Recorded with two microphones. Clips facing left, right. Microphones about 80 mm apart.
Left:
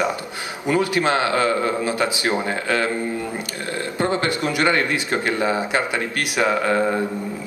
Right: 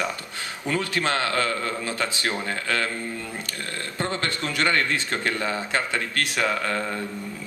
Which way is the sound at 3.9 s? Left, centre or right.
Centre.